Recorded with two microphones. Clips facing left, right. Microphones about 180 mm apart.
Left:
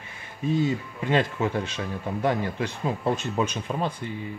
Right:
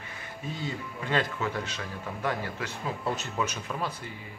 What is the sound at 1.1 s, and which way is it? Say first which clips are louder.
Speech: left 5 dB; 25° left (ahead or behind).